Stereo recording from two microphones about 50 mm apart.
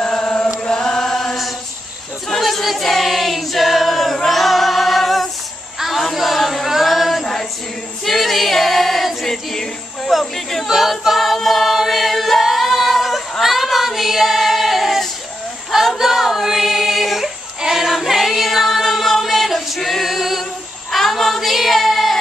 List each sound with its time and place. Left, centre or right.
0.0 s chant: centre
2.2 s choir: centre
5.8 s a sound: centre
8.0 s choir: centre
13.4 s female singing: centre
15.7 s a sound: centre
17.9 s choir: centre
20.9 s child singing: centre